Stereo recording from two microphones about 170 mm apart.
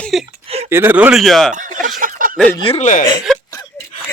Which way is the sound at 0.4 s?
35° right (ahead or behind).